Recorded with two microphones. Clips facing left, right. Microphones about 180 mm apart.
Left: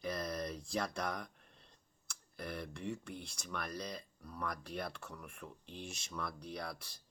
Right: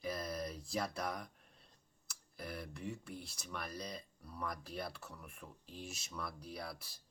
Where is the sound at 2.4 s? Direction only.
5° right (ahead or behind).